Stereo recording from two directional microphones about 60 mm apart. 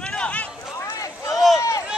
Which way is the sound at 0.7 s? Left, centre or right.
Left.